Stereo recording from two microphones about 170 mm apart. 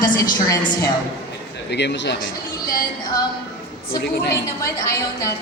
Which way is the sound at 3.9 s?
75° left (ahead or behind).